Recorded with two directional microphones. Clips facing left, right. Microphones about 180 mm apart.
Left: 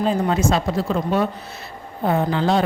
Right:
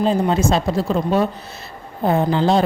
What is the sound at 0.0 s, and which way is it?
Speech, 30° right (ahead or behind).